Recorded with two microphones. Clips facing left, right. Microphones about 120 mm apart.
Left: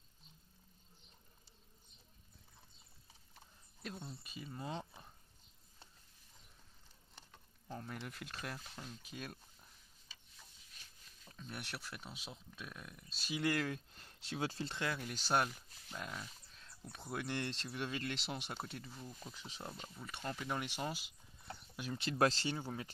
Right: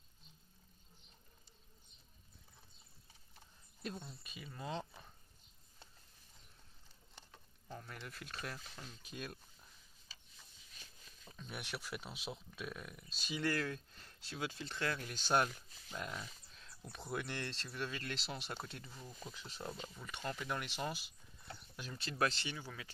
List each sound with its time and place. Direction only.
3.8 s speech: 5° left (ahead or behind)
7.9 s speech: 15° left (ahead or behind)
11.3 s speech: 5° right (ahead or behind)
13.1 s speech: 10° left (ahead or behind); by 14.8 s 30° left (ahead or behind)
14.8 s speech: 10° left (ahead or behind)
18.0 s speech: 10° left (ahead or behind)
21.9 s speech: 20° left (ahead or behind)
22.2 s speech: 35° left (ahead or behind)